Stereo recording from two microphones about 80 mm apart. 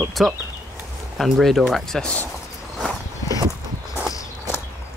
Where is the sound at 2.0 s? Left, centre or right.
Centre.